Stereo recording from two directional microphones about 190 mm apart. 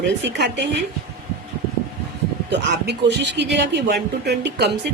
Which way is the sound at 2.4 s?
65° right (ahead or behind).